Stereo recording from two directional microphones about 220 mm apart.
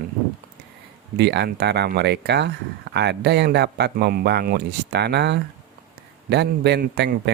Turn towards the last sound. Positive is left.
turn(degrees=-50)  # may be behind; listen again after turning